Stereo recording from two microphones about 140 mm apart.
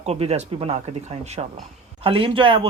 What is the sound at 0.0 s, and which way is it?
Speech, 50° right (ahead or behind).